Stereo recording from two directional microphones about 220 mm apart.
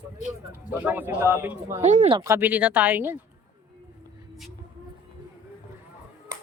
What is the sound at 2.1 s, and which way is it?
Speech, 10° right (ahead or behind).